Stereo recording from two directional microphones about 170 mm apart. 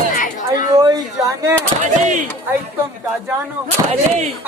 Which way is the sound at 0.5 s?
25° right (ahead or behind).